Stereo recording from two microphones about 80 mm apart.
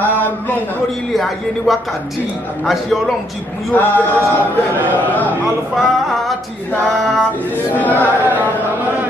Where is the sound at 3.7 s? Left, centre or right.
Left.